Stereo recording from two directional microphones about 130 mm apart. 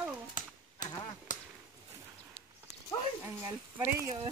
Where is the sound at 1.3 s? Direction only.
80° left.